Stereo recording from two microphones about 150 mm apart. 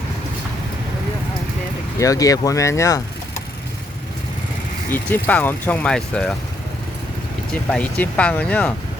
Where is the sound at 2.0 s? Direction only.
25° left (ahead or behind).